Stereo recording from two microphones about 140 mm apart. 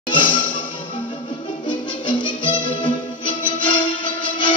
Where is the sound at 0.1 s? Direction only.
35° left (ahead or behind).